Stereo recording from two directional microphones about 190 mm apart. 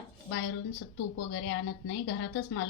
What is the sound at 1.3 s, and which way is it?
Speech, 80° left.